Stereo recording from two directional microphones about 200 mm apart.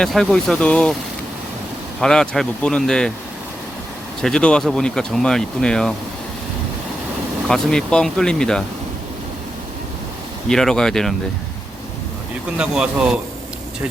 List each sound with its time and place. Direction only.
0.0 s speech: centre (ahead or behind)
2.0 s speech: 5° left (ahead or behind)
4.2 s speech: 5° left (ahead or behind)
7.4 s speech: 5° left (ahead or behind)
10.5 s speech: 5° left (ahead or behind)
12.5 s speech: 5° right (ahead or behind)